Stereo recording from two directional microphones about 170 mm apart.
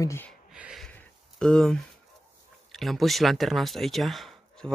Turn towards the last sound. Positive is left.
turn(degrees=0)  # may be behind; listen again after turning